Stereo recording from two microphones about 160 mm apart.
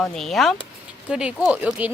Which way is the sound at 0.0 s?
5° left (ahead or behind).